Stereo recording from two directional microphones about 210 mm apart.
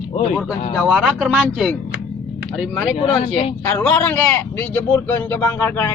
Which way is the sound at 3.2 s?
30° left (ahead or behind).